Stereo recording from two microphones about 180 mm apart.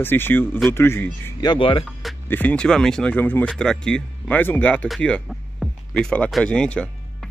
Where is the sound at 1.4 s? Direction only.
25° left (ahead or behind).